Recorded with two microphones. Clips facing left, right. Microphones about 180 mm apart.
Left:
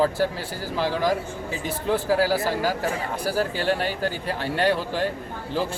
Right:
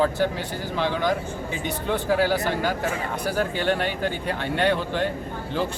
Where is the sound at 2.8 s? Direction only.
35° left (ahead or behind).